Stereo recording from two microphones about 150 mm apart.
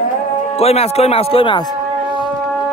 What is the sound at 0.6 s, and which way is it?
Speech, 45° left (ahead or behind).